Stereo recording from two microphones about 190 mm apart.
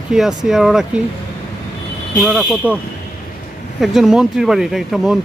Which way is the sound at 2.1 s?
Centre (ahead or behind).